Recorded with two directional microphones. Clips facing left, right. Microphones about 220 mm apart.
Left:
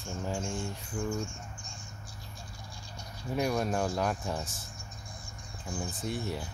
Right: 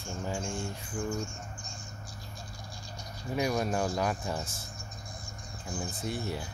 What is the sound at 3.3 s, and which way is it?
Speech, centre (ahead or behind).